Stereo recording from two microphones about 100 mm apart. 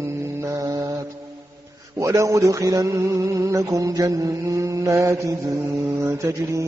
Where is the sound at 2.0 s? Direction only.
30° right (ahead or behind).